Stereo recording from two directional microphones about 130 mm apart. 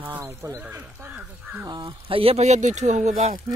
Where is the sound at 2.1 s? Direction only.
45° right (ahead or behind); by 3.6 s 65° right (ahead or behind).